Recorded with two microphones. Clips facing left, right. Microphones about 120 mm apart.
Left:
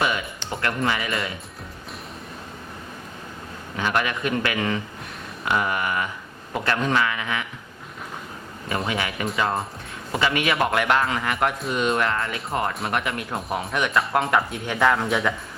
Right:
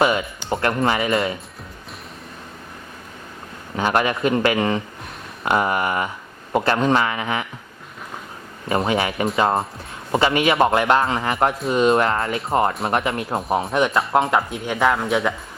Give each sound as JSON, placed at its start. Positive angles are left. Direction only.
{"t": 0.5, "sound": "a man's voice", "side_deg": -30}
{"t": 3.8, "sound": "a man's voice", "side_deg": -35}
{"t": 8.9, "sound": "a man's voice", "side_deg": -30}
{"t": 14.7, "sound": "speech", "side_deg": -15}
{"t": 14.9, "sound": "speech", "side_deg": 0}